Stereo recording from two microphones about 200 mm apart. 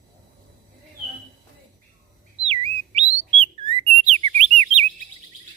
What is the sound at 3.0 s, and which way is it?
Bird, 30° right (ahead or behind).